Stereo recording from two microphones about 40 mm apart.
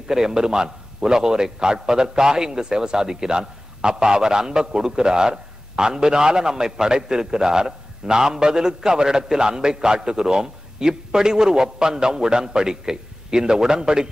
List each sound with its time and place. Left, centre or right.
0.1 s a man's voice: centre